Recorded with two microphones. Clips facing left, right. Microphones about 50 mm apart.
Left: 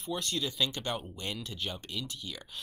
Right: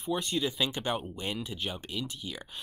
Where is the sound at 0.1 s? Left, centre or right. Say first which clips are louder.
Right 4 dB; centre.